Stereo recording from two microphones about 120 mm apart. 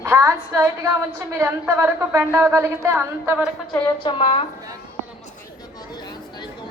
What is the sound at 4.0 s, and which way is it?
Speech, 45° left (ahead or behind).